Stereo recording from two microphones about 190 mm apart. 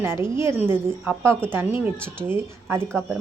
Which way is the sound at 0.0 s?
15° right (ahead or behind).